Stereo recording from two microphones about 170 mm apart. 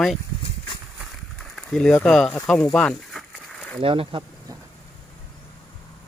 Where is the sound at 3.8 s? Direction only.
30° right (ahead or behind).